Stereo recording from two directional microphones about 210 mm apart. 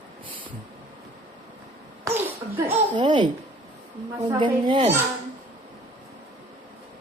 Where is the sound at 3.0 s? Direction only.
20° right (ahead or behind).